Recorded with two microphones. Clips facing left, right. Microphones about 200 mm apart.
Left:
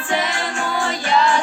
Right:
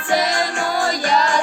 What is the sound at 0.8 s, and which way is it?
Music, 40° right (ahead or behind).